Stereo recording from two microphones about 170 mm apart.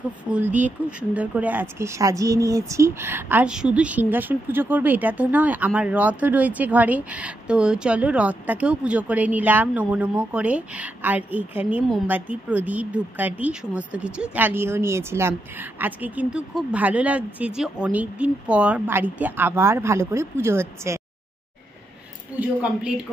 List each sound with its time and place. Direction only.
0.2 s speech: 10° right (ahead or behind)
22.4 s speech: 5° right (ahead or behind)